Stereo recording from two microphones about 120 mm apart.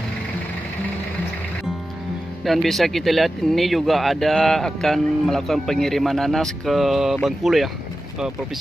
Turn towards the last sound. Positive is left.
turn(degrees=0)  # may be behind; listen again after turning